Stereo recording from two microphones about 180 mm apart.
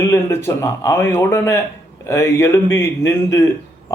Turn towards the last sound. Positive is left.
turn(degrees=15)  # may be behind; listen again after turning